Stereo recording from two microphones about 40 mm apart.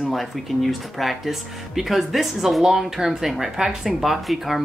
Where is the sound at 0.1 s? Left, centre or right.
Centre.